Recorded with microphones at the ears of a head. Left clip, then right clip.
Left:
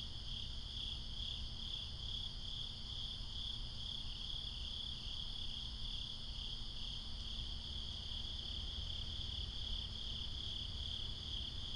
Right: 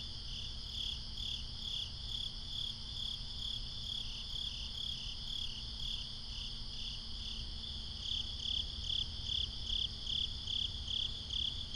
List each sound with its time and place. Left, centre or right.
8.1 s cricket: right